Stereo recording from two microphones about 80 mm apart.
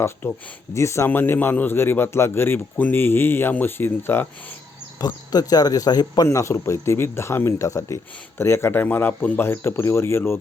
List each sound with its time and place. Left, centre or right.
0.2 s speech: left
4.9 s speech: left
6.2 s speech: left